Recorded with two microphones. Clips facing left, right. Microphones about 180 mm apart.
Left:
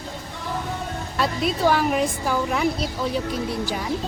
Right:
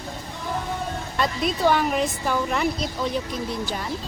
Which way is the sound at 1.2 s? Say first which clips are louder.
Left 1 dB; 5° left (ahead or behind).